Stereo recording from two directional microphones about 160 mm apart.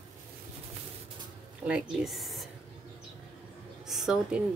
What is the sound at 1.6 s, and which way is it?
Speech, 5° right (ahead or behind).